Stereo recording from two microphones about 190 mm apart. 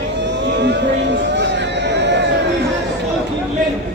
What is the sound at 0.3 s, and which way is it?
Vehicle, 65° right (ahead or behind).